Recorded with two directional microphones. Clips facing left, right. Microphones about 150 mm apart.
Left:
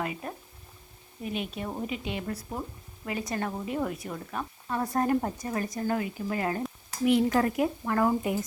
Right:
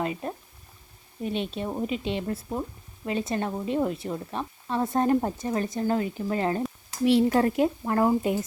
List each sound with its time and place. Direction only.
0.0 s speech: 30° right (ahead or behind)